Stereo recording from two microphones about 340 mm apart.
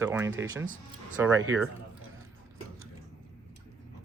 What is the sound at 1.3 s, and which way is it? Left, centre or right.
Speech, right.